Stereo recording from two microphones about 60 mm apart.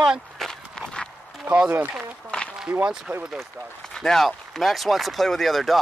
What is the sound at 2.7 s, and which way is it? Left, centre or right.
Speech, right.